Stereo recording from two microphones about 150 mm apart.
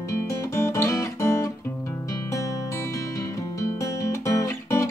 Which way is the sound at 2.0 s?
20° left (ahead or behind).